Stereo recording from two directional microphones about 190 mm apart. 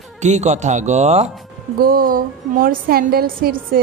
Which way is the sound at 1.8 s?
50° right (ahead or behind).